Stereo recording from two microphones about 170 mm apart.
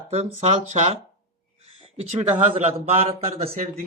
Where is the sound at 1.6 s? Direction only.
35° right (ahead or behind).